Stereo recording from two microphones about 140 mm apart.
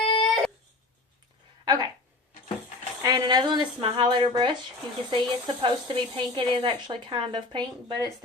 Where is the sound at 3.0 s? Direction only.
30° right (ahead or behind).